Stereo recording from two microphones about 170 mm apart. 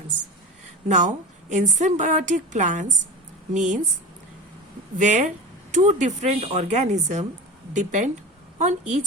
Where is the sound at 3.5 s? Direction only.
45° right (ahead or behind).